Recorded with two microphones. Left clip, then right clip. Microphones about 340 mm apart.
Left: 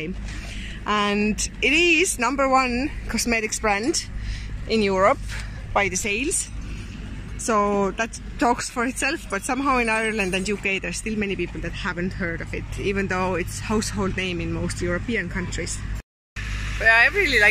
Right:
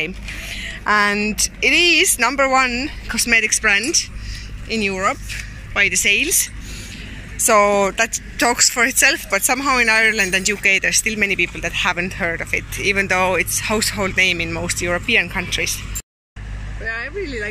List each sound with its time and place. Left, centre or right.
0.6 s a woman's voice: centre
7.4 s speech: centre
16.8 s speech: centre